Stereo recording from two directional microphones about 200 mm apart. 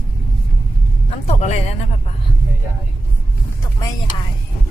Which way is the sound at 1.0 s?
30° left (ahead or behind).